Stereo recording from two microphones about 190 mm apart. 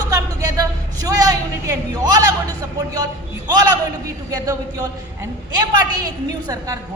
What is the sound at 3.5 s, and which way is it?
A woman's voice, 20° right (ahead or behind).